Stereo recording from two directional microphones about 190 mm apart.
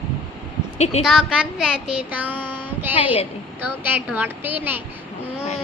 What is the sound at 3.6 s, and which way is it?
Speech, 10° right (ahead or behind).